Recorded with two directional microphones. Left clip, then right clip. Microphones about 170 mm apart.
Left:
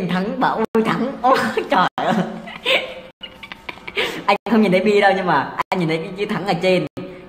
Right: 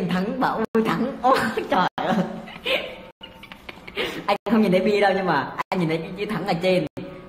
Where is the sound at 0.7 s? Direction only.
20° left (ahead or behind).